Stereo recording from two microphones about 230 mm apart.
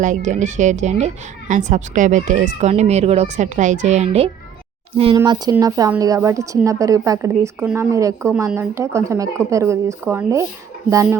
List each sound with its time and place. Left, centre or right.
0.0 s a woman's voice: right; by 11.2 s centre